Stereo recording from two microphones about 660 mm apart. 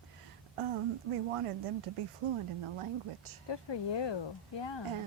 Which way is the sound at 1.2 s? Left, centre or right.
Right.